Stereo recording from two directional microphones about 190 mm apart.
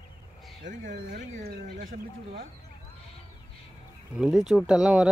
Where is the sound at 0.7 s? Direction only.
45° right (ahead or behind).